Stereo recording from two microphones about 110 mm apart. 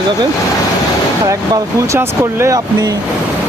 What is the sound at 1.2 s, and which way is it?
Speech, 30° right (ahead or behind).